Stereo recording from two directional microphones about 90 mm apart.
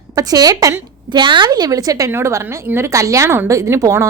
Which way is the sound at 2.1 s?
30° right (ahead or behind).